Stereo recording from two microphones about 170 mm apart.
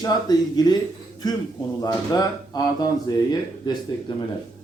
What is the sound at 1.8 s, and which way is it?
Speech, 25° left (ahead or behind).